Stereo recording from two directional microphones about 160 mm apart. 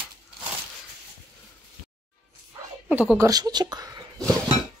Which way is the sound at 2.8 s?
10° right (ahead or behind).